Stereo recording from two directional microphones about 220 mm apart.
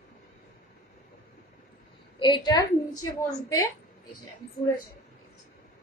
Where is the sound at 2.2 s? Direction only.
20° left (ahead or behind).